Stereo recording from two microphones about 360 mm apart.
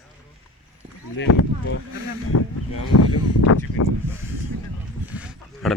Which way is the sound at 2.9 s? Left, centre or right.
Left.